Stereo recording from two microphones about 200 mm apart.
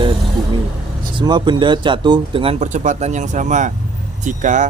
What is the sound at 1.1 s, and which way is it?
Speech, 20° right (ahead or behind).